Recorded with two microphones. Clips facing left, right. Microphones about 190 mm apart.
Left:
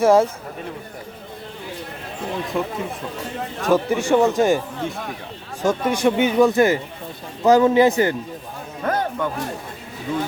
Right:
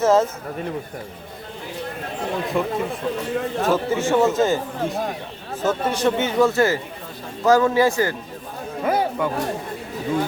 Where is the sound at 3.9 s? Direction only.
15° left (ahead or behind).